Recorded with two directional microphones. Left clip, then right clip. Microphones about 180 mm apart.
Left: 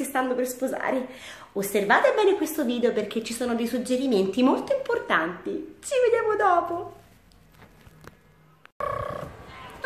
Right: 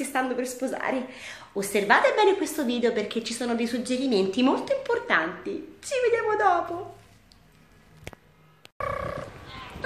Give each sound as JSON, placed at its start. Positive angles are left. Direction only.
{"t": 0.0, "sound": "a woman's voice", "side_deg": 0}
{"t": 8.7, "sound": "wild animals", "side_deg": 30}